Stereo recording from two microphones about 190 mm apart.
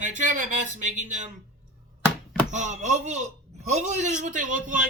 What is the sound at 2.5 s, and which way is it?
A man's voice, 40° right (ahead or behind).